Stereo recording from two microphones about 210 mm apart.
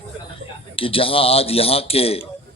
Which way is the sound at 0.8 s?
25° left (ahead or behind).